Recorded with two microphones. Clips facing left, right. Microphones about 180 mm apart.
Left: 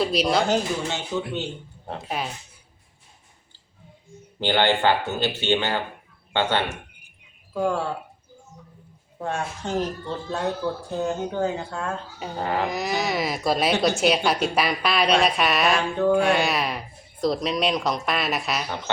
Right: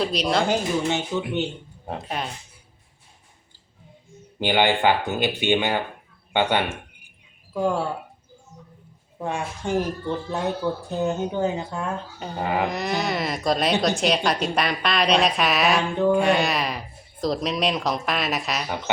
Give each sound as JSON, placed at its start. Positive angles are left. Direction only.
{"t": 0.0, "sound": "speech", "side_deg": 0}
{"t": 0.4, "sound": "speech", "side_deg": -15}
{"t": 2.0, "sound": "speech", "side_deg": 0}
{"t": 4.4, "sound": "speech", "side_deg": -15}
{"t": 7.5, "sound": "speech", "side_deg": -15}
{"t": 9.2, "sound": "speech", "side_deg": -15}
{"t": 12.6, "sound": "speech", "side_deg": 0}